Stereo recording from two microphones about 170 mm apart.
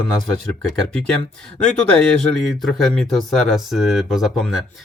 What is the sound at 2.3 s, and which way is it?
Speech, centre (ahead or behind).